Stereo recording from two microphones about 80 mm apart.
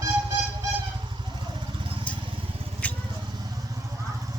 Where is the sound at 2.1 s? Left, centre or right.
Centre.